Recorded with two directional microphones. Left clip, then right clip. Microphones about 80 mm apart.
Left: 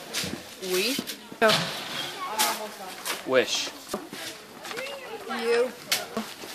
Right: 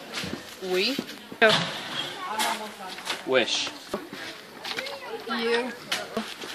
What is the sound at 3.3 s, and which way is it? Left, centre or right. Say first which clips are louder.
Speech: even; left.